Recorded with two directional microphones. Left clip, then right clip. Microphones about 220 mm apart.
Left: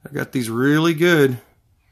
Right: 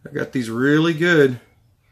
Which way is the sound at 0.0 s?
45° left (ahead or behind).